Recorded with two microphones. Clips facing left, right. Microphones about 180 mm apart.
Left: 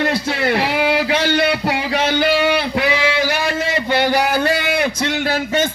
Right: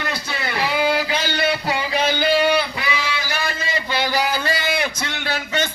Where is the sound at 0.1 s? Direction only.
85° left; by 4.9 s 55° left (ahead or behind).